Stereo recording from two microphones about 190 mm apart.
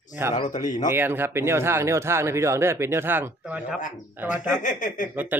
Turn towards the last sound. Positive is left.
turn(degrees=40)  # may be behind; listen again after turning